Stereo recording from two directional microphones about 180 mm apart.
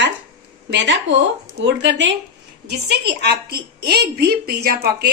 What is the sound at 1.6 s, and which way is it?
Speech, 90° right.